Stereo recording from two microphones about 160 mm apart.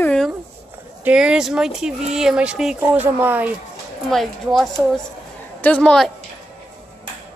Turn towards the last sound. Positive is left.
turn(degrees=5)  # may be behind; listen again after turning